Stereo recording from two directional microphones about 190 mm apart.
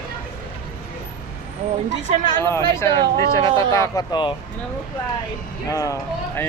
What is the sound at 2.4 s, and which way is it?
Speech, 15° left (ahead or behind).